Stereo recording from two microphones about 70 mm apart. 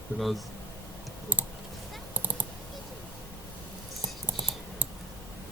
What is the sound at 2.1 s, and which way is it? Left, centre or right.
Clicking, right.